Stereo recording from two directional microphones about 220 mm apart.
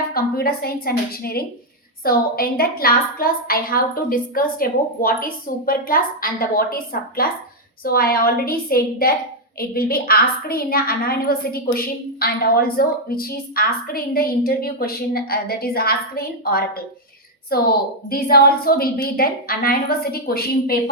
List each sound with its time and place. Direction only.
0.1 s a woman's voice: 45° left (ahead or behind)